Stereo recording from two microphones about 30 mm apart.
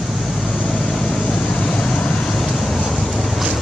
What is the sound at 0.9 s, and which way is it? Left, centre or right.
Vehicle, centre.